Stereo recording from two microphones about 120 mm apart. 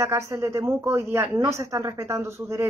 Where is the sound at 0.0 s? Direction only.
25° right (ahead or behind).